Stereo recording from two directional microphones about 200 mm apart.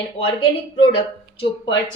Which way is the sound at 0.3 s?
25° left (ahead or behind).